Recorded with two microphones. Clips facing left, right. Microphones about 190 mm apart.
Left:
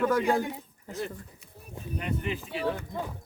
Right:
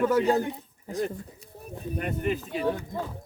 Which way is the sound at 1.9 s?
50° right (ahead or behind).